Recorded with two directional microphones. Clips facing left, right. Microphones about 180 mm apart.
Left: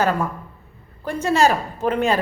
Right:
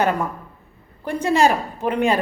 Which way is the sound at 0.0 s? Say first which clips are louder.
Even; 20° right (ahead or behind).